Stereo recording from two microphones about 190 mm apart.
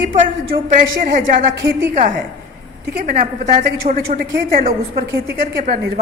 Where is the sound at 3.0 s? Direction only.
50° right (ahead or behind).